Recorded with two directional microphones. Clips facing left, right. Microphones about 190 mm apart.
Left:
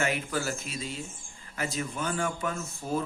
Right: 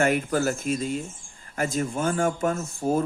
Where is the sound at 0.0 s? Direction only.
50° right (ahead or behind).